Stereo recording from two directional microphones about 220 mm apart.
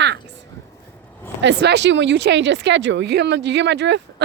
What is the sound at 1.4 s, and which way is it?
Speech, 50° right (ahead or behind).